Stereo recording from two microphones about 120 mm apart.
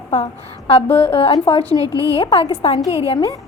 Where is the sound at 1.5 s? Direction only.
50° left (ahead or behind).